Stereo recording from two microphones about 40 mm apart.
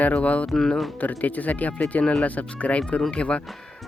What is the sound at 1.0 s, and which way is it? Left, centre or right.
Speech, left.